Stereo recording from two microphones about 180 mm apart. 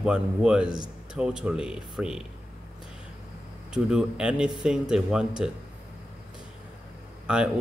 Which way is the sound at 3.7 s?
5° right (ahead or behind).